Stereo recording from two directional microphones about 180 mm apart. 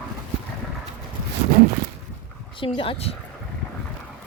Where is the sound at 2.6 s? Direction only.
30° left (ahead or behind).